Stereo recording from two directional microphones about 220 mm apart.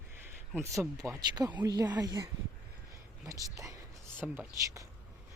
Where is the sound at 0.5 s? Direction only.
10° right (ahead or behind).